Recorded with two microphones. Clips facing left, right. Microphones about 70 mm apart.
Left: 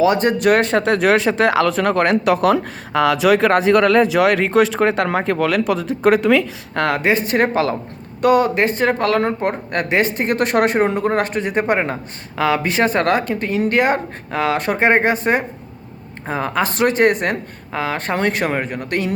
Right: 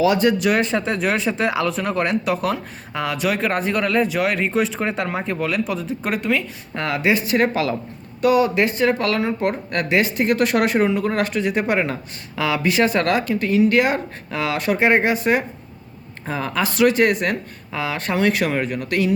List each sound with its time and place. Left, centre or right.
0.0 s speech: left
6.7 s speech: left
7.0 s speech: left